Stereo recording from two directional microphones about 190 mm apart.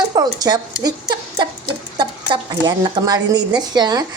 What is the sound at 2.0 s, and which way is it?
A woman's voice, 20° right (ahead or behind).